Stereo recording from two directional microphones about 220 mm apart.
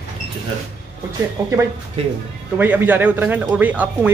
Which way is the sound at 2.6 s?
10° right (ahead or behind).